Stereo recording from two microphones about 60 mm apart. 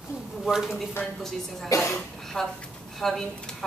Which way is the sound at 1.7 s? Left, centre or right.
Left.